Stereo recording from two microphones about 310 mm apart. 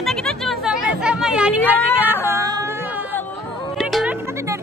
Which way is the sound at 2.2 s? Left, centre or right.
Centre.